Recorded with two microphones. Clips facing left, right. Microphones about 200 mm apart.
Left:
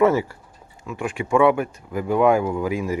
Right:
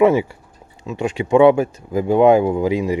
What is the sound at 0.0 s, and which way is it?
Speech, 15° right (ahead or behind).